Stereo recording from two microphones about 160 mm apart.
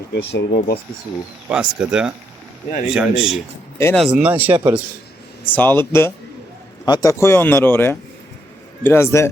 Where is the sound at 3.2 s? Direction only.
Centre (ahead or behind).